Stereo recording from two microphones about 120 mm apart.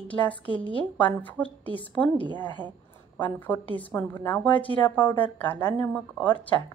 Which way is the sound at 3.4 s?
15° left (ahead or behind).